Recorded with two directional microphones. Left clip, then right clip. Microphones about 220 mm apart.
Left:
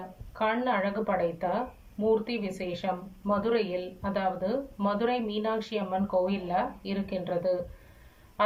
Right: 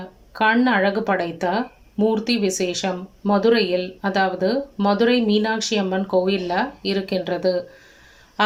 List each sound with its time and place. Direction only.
0.3 s speech: 50° right (ahead or behind)